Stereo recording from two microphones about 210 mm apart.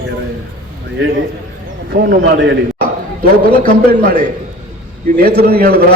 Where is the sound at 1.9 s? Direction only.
50° right (ahead or behind).